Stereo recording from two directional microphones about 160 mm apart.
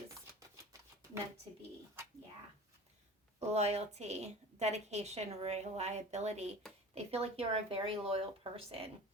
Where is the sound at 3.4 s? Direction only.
45° right (ahead or behind).